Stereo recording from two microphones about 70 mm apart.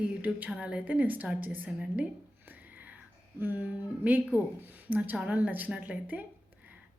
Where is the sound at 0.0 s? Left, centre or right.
Right.